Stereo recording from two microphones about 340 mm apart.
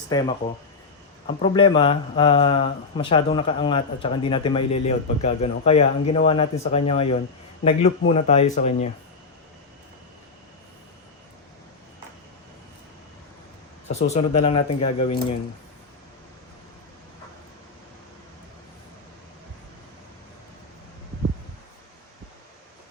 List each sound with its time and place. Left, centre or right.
0.1 s speech: centre
13.9 s speech: centre